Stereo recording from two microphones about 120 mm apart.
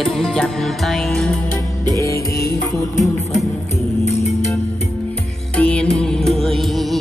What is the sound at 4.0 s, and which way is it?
Music, 65° left (ahead or behind).